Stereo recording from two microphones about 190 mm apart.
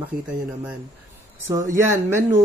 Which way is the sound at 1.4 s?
15° right (ahead or behind).